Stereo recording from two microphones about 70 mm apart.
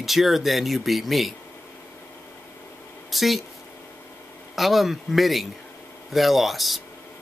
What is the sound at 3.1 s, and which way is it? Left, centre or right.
Speech, centre.